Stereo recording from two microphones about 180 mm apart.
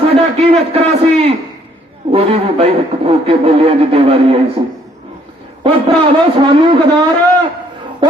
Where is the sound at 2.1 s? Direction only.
35° right (ahead or behind).